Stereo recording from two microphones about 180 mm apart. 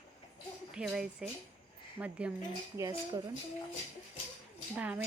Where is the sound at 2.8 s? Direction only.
20° right (ahead or behind).